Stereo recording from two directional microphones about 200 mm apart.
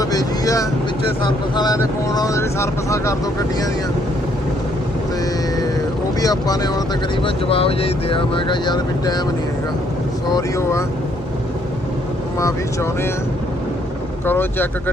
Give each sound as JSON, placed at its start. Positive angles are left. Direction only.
{"t": 0.0, "sound": "vehicle", "side_deg": 15}
{"t": 1.5, "sound": "speech", "side_deg": 20}
{"t": 6.1, "sound": "speech", "side_deg": 20}
{"t": 10.3, "sound": "speech", "side_deg": 15}
{"t": 12.4, "sound": "speech", "side_deg": 15}
{"t": 14.3, "sound": "speech", "side_deg": 10}